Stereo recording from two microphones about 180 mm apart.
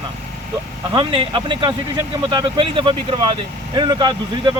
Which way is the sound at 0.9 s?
25° right (ahead or behind).